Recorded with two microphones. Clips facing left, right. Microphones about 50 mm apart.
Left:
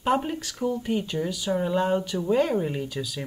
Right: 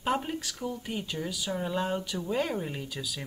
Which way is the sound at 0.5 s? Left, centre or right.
Centre.